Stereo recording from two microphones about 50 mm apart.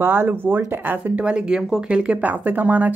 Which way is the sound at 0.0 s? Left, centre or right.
Right.